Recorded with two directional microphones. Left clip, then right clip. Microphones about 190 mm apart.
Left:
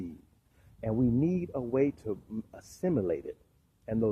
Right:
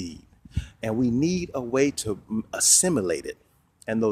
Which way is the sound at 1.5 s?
35° right (ahead or behind).